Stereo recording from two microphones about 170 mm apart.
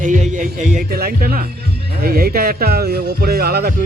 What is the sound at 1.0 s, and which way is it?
Music, 60° right (ahead or behind).